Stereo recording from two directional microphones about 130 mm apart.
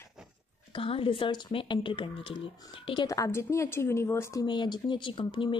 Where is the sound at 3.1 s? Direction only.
20° left (ahead or behind).